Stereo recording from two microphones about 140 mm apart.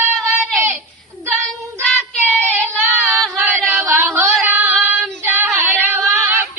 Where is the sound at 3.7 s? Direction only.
Centre (ahead or behind).